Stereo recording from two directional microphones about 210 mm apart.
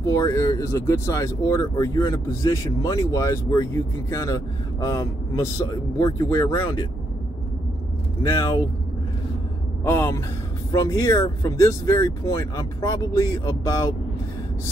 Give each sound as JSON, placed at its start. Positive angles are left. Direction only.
{"t": 0.0, "sound": "speech", "side_deg": 15}
{"t": 8.2, "sound": "speech", "side_deg": 15}
{"t": 9.8, "sound": "speech", "side_deg": 10}